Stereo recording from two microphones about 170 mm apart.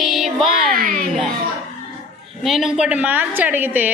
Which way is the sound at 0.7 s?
55° right (ahead or behind).